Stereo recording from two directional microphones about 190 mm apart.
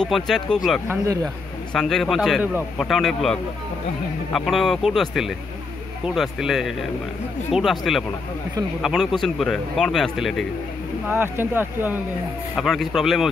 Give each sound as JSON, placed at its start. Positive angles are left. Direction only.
{"t": 0.0, "sound": "speech", "side_deg": 0}
{"t": 0.8, "sound": "speech", "side_deg": -15}
{"t": 1.2, "sound": "speech", "side_deg": 5}
{"t": 11.1, "sound": "speech", "side_deg": -10}
{"t": 12.5, "sound": "speech", "side_deg": 0}